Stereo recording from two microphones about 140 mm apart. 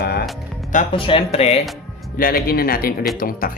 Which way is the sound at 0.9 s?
40° left (ahead or behind).